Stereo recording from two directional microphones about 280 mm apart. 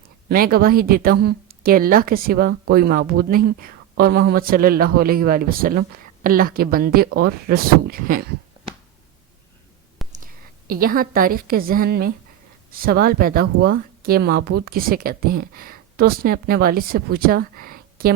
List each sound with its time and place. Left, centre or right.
0.3 s speech: right
10.0 s a sound: centre
10.7 s speech: right